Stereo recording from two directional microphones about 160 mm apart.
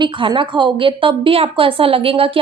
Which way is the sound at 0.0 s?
30° right (ahead or behind).